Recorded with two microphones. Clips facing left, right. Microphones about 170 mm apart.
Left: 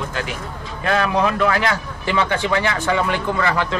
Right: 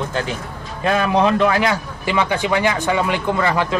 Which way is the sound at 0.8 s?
20° right (ahead or behind).